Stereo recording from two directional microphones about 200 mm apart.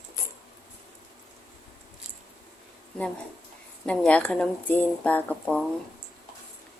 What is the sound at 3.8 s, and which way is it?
Speech, 5° left (ahead or behind).